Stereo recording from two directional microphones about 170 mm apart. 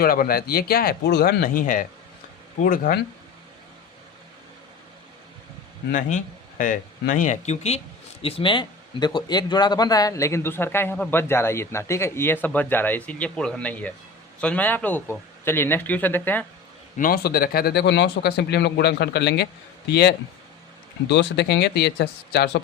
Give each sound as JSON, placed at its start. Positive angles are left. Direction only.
{"t": 0.0, "sound": "speech", "side_deg": 60}
{"t": 5.9, "sound": "speech", "side_deg": 50}
{"t": 17.0, "sound": "speech", "side_deg": 60}
{"t": 21.1, "sound": "speech", "side_deg": 85}